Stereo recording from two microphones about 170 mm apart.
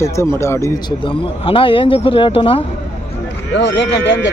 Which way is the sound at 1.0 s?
30° left (ahead or behind).